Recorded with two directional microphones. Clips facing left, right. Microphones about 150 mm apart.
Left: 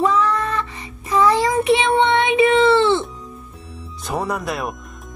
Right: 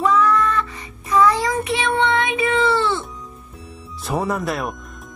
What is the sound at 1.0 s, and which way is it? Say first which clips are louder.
Child singing: left 1 dB; 25° left (ahead or behind).